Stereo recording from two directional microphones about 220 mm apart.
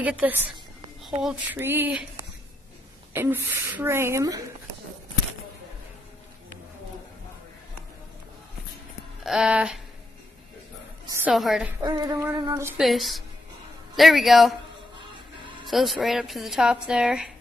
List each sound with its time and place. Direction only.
0.0 s a woman's voice: 5° right (ahead or behind)
9.2 s speech: centre (ahead or behind)
11.2 s speech: centre (ahead or behind)
11.8 s a woman's voice: 15° right (ahead or behind)
12.8 s speech: centre (ahead or behind)
15.0 s music: 20° right (ahead or behind)
15.6 s speech: centre (ahead or behind)